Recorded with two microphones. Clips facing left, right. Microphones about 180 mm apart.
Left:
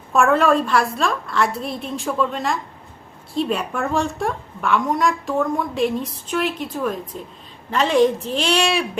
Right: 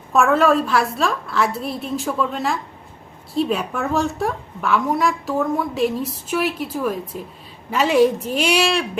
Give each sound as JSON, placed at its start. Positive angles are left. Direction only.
{"t": 0.1, "sound": "a woman's voice", "side_deg": 0}